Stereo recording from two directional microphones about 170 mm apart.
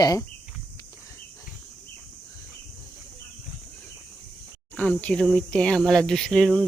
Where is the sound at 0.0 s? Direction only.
20° left (ahead or behind).